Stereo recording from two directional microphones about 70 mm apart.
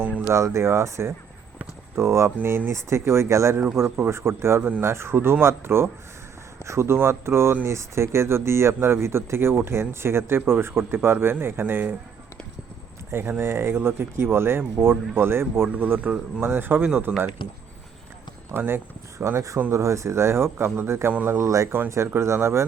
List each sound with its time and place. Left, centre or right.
0.3 s speech: right
13.1 s speech: right
15.7 s speech: right
18.5 s speech: right
19.2 s speech: right